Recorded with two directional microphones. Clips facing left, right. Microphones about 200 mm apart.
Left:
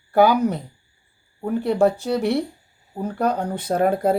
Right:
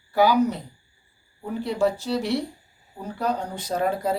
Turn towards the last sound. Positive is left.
turn(degrees=55)  # may be behind; listen again after turning